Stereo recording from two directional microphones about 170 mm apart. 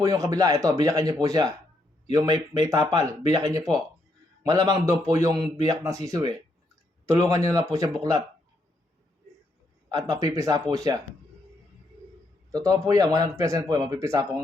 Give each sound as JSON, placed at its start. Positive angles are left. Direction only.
{"t": 0.0, "sound": "speech", "side_deg": -20}
{"t": 9.9, "sound": "speech", "side_deg": -20}
{"t": 12.5, "sound": "speech", "side_deg": -20}